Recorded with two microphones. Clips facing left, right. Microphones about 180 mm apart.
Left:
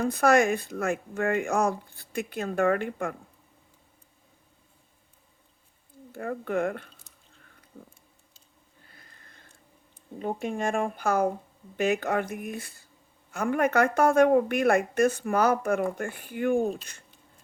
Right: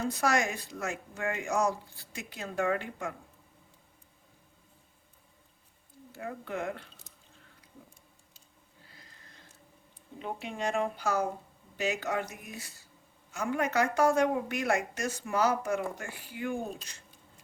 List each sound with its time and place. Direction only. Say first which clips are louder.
0.0 s a woman's voice: left 7 dB; 55° left (ahead or behind)
6.1 s speech: left 7 dB; 55° left (ahead or behind)
8.9 s a sound: left 1 dB; 55° left (ahead or behind)
10.4 s a woman's voice: left 3 dB; 50° left (ahead or behind)